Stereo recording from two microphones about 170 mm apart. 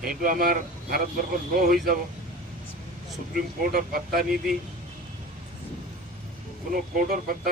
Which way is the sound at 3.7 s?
60° right (ahead or behind).